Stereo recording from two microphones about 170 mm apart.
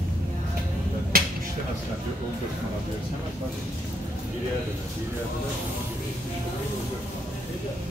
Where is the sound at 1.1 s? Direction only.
60° right (ahead or behind).